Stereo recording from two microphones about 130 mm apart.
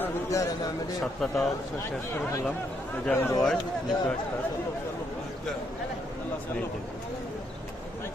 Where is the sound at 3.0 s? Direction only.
15° left (ahead or behind).